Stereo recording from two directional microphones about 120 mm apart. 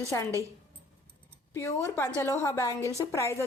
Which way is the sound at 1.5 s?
20° left (ahead or behind).